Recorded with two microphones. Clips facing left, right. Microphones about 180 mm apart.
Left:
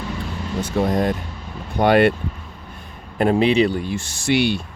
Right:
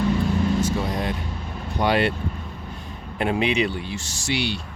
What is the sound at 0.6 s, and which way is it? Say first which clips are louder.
Speech: left 5 dB; 50° left (ahead or behind).